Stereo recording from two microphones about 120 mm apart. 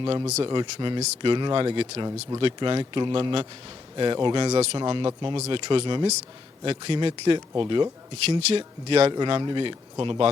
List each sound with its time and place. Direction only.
0.0 s speech: 35° right (ahead or behind)
4.5 s speech: 55° right (ahead or behind)
4.8 s speech: 40° right (ahead or behind)
8.3 s speech: 55° right (ahead or behind)
9.1 s speech: 40° right (ahead or behind)